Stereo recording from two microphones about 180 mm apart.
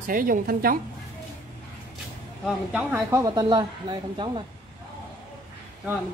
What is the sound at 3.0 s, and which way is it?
A woman's voice, 20° right (ahead or behind).